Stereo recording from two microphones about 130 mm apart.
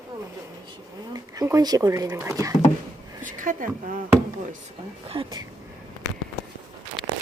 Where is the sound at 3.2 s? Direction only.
90° right.